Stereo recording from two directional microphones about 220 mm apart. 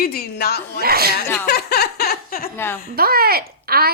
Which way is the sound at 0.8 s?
45° right (ahead or behind).